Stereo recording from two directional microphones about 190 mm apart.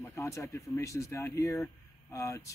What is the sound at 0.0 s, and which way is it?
Speech, 15° left (ahead or behind).